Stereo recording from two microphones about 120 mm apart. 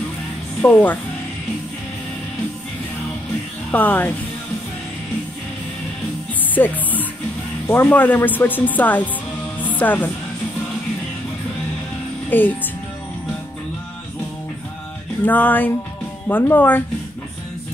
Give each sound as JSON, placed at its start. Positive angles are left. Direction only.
{"t": 0.6, "sound": "a woman's voice", "side_deg": 15}
{"t": 3.7, "sound": "speech", "side_deg": 15}
{"t": 6.5, "sound": "speech", "side_deg": 15}
{"t": 9.6, "sound": "music", "side_deg": 15}
{"t": 12.3, "sound": "speech", "side_deg": 15}
{"t": 15.2, "sound": "speech", "side_deg": 15}